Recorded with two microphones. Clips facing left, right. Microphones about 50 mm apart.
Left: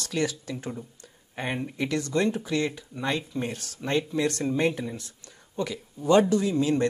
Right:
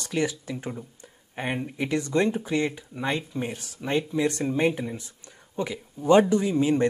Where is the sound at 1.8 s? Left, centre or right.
Right.